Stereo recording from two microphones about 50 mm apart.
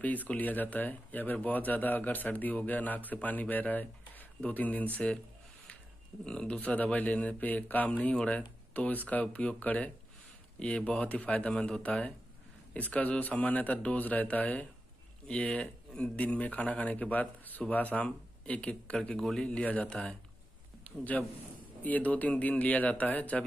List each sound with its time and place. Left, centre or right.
0.0 s speech: left
6.2 s speech: left
15.3 s speech: centre
16.2 s speech: left
19.1 s a man's voice: centre
19.4 s speech: left
20.8 s speech: left